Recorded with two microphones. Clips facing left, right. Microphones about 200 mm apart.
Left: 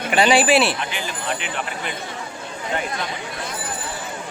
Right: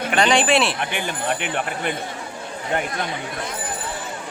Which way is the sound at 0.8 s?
55° right (ahead or behind).